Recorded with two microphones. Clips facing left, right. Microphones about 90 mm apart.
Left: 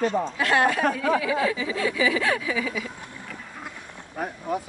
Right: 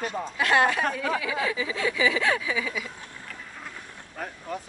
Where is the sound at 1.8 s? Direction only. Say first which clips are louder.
Left 1 dB; 25° right (ahead or behind).